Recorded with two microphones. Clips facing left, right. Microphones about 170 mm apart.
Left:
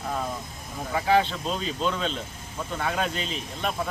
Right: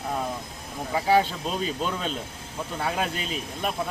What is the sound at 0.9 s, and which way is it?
Speech, 10° right (ahead or behind).